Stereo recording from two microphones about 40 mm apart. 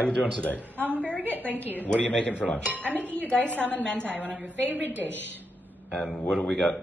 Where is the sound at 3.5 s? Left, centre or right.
Right.